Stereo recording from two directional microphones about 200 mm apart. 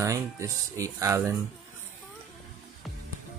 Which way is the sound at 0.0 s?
15° right (ahead or behind).